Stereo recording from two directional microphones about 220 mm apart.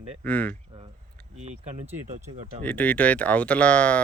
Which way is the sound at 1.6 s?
30° right (ahead or behind).